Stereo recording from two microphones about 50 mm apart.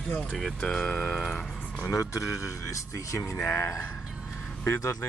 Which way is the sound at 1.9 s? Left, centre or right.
Left.